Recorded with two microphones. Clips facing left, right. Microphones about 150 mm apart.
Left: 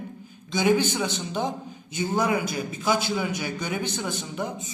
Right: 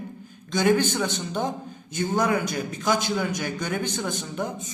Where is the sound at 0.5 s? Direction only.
10° left (ahead or behind).